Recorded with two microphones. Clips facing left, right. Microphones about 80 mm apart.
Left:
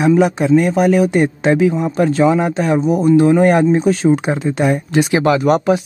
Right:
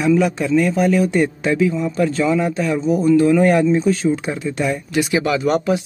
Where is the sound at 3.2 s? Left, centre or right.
Left.